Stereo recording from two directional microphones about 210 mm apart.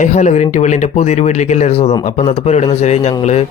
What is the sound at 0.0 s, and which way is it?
Speech, 35° left (ahead or behind).